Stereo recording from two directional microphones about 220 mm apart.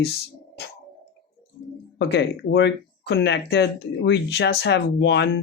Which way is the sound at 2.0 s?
50° left (ahead or behind).